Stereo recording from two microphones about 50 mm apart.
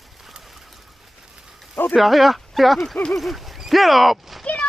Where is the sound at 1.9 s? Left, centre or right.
Centre.